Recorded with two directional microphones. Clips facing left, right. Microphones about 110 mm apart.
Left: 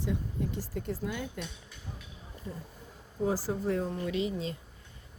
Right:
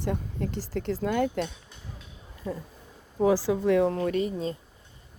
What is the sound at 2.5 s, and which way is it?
Speech, 90° right.